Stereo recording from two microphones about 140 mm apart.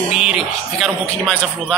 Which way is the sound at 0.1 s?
5° right (ahead or behind).